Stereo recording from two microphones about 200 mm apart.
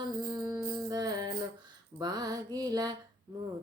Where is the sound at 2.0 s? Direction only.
20° right (ahead or behind).